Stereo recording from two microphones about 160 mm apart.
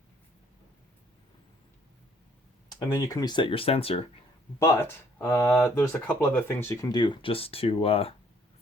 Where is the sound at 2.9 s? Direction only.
20° left (ahead or behind); by 4.1 s 35° left (ahead or behind).